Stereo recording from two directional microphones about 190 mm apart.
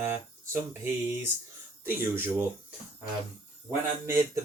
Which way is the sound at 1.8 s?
10° right (ahead or behind).